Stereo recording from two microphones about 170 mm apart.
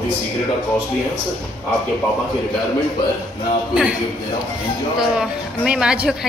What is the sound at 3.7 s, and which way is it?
Speech, 5° right (ahead or behind).